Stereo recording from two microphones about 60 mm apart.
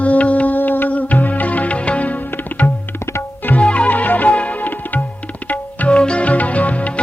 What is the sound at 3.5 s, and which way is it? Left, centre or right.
Music, left.